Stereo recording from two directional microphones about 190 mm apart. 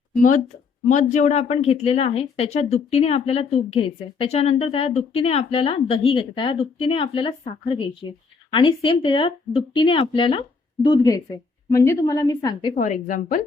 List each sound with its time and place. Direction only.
0.2 s a woman's voice: 45° left (ahead or behind); by 12.7 s 20° left (ahead or behind)
12.7 s a woman's voice: 40° left (ahead or behind)